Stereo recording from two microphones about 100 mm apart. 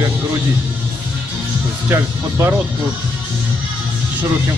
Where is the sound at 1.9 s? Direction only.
25° right (ahead or behind).